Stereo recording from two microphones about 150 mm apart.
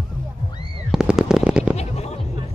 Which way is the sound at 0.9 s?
5° right (ahead or behind).